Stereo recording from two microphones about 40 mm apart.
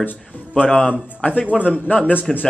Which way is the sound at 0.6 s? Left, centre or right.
Left.